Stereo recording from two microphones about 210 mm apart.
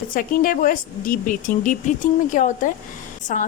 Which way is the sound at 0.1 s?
40° left (ahead or behind).